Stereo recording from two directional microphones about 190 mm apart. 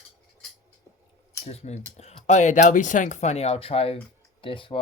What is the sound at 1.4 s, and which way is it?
Speech, 35° left (ahead or behind).